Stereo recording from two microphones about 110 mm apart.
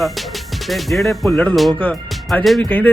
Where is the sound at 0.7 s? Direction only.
Centre (ahead or behind).